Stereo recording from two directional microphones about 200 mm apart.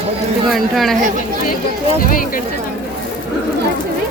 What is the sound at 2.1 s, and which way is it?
Speech, 45° left (ahead or behind).